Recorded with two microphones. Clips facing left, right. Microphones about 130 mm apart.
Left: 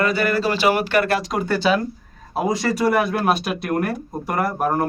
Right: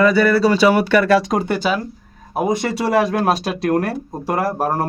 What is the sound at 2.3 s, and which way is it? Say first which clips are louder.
Speech: right 2 dB; 20° right (ahead or behind).